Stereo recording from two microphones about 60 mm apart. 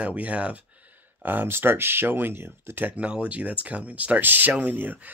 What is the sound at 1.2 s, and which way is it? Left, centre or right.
Speech, right.